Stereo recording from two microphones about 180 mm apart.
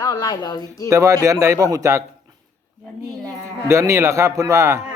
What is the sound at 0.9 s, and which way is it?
Speech, 15° right (ahead or behind).